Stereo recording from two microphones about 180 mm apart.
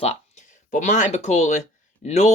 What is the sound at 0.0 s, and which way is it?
Speech, 40° left (ahead or behind).